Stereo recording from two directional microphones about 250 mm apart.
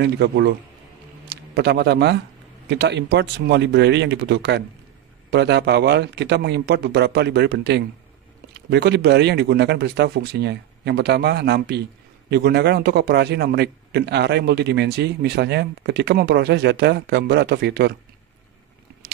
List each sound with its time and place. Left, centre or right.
0.0 s a man's voice: right